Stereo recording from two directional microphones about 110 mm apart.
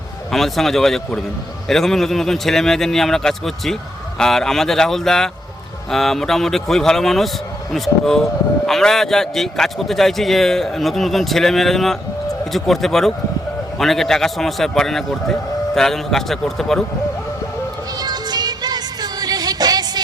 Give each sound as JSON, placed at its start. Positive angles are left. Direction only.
{"t": 0.3, "sound": "speech", "side_deg": 5}
{"t": 17.9, "sound": "music", "side_deg": -40}